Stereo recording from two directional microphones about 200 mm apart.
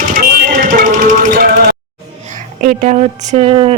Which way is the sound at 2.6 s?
35° right (ahead or behind).